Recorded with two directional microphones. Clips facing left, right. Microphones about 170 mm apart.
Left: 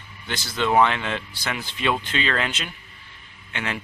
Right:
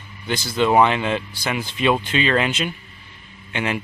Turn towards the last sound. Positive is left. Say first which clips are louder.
# right 6 dB
turn(degrees=-15)  # may be behind; listen again after turning